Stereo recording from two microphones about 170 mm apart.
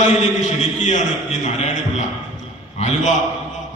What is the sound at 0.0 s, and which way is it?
A man's voice, 40° left (ahead or behind).